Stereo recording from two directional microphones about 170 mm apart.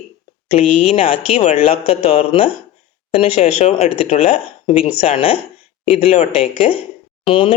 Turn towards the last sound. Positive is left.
turn(degrees=30)  # may be behind; listen again after turning